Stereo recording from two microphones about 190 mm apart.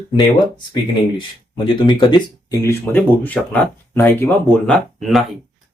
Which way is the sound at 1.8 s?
25° left (ahead or behind).